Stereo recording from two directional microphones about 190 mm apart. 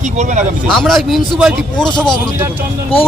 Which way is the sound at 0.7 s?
Centre (ahead or behind).